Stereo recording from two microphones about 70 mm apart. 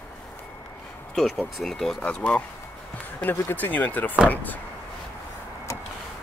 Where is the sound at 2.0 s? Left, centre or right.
Centre.